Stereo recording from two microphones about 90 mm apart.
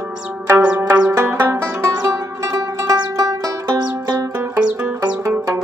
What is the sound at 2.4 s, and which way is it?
Music, 40° right (ahead or behind).